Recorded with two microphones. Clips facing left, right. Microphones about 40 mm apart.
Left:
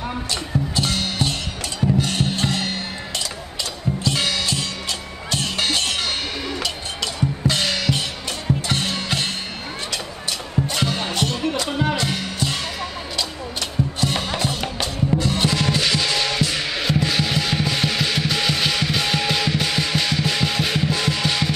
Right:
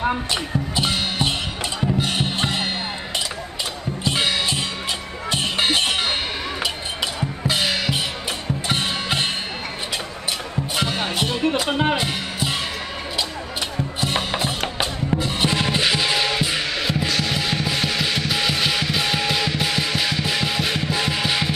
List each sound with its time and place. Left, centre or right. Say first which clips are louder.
0.0 s music: right 4 dB; right
4.0 s music: right 2 dB; centre
7.2 s drum: left 3 dB; centre
8.6 s music: right 1 dB; centre
10.7 s music: right 3 dB; centre
11.7 s music: right 2 dB; right
12.1 s music: even; centre
14.0 s music: right 2 dB; centre
16.7 s music: left 1 dB; centre